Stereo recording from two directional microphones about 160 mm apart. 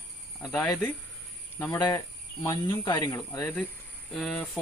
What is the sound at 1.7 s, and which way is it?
Speech, 20° left (ahead or behind).